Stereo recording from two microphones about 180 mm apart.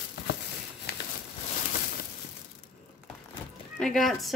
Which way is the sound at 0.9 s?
65° left (ahead or behind).